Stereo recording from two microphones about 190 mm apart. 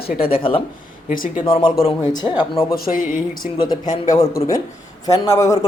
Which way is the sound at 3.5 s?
20° left (ahead or behind).